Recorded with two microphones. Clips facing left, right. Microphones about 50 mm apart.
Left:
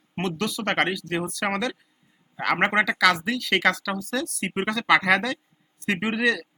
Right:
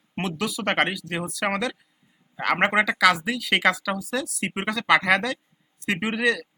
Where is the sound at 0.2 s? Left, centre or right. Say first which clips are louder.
Even; centre.